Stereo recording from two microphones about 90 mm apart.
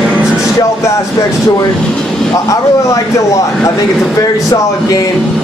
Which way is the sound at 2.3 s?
35° left (ahead or behind).